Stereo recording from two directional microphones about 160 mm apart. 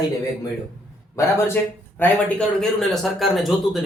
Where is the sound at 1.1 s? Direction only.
15° left (ahead or behind).